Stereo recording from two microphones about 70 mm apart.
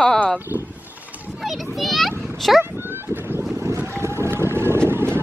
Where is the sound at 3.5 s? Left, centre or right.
Right.